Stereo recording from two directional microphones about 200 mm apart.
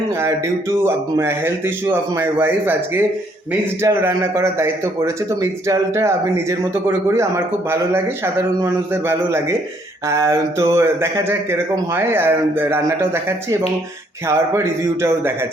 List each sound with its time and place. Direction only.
0.2 s speech: 15° right (ahead or behind)